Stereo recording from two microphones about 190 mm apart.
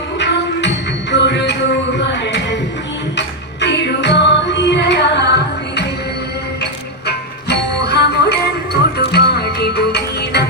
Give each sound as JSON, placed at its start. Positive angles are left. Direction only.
{"t": 0.2, "sound": "music", "side_deg": 65}
{"t": 2.0, "sound": "a sound", "side_deg": 65}
{"t": 3.2, "sound": "music", "side_deg": 65}
{"t": 7.1, "sound": "music", "side_deg": 60}